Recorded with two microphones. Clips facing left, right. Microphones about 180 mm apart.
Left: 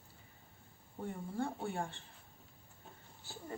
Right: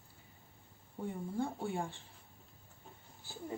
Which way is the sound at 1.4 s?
Centre (ahead or behind).